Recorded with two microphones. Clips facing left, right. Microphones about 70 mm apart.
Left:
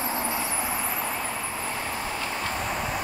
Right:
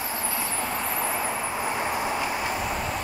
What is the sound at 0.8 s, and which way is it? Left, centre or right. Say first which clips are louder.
Vehicle: right 2 dB; centre.